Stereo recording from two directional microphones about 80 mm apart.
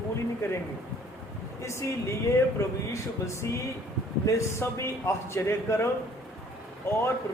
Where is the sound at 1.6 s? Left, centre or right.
Left.